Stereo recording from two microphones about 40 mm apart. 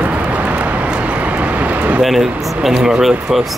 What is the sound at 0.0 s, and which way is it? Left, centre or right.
Vehicle, right.